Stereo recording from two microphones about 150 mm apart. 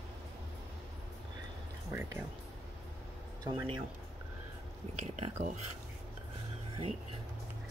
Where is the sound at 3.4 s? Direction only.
30° right (ahead or behind).